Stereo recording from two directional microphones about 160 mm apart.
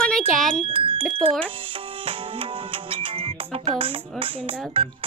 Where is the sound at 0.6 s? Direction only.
35° right (ahead or behind).